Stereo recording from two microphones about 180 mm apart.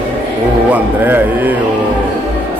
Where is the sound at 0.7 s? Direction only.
10° right (ahead or behind).